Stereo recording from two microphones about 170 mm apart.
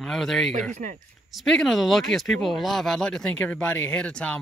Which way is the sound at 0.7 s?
50° right (ahead or behind).